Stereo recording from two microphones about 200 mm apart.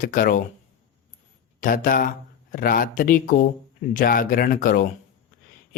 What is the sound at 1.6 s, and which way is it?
Speech, 45° left (ahead or behind).